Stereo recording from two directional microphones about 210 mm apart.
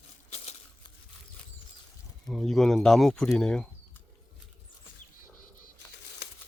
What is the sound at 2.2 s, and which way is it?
Speech, centre (ahead or behind).